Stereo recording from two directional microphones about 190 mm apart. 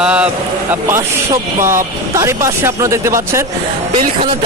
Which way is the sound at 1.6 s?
15° right (ahead or behind).